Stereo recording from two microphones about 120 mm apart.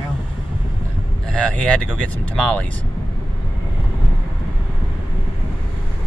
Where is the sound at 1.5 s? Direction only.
10° left (ahead or behind).